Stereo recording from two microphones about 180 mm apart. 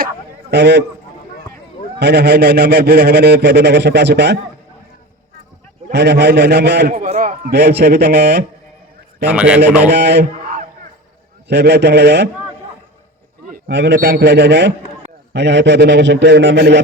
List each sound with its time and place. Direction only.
0.5 s a man's voice: 70° right (ahead or behind)
2.0 s speech: 65° right (ahead or behind)
5.9 s a man's voice: 70° right (ahead or behind)
6.9 s a man's voice: 40° right (ahead or behind)
7.5 s speech: 65° right (ahead or behind)
9.2 s a man's voice: 5° right (ahead or behind)
9.9 s a man's voice: 65° right (ahead or behind)
11.4 s a man's voice: 70° right (ahead or behind)
13.5 s a man's voice: 70° right (ahead or behind)